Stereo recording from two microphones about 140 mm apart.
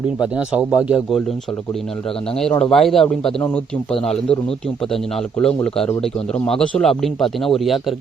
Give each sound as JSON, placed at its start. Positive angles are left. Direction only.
{"t": 0.2, "sound": "a man's voice", "side_deg": -5}
{"t": 2.6, "sound": "a man's voice", "side_deg": 5}